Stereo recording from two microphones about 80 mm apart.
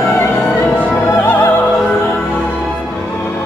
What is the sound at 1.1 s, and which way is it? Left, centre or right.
Music, left.